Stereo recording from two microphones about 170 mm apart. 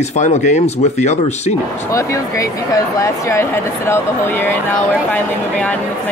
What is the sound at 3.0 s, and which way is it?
Speech, 15° left (ahead or behind).